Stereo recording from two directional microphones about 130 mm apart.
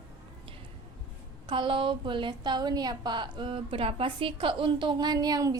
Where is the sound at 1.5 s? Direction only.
40° right (ahead or behind).